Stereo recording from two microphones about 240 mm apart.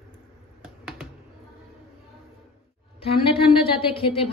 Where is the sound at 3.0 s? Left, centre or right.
Left.